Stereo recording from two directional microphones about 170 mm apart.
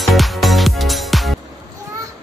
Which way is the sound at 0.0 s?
Centre (ahead or behind).